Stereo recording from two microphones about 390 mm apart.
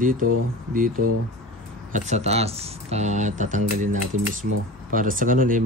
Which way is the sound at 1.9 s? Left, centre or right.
Centre.